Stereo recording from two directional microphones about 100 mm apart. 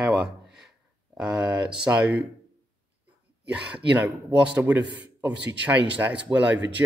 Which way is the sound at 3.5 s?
15° right (ahead or behind).